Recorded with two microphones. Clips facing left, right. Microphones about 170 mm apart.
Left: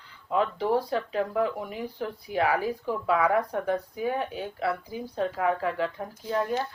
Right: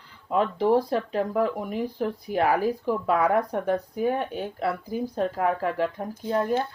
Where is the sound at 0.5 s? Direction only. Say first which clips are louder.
Right 4 dB; 35° right (ahead or behind).